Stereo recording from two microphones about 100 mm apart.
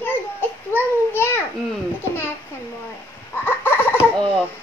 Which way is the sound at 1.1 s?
25° left (ahead or behind).